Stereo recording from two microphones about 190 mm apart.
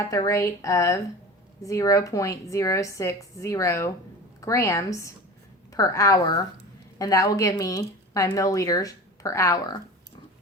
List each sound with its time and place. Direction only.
0.1 s speech: 15° left (ahead or behind)